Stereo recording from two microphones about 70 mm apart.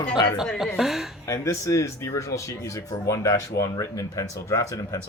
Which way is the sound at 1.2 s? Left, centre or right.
Left.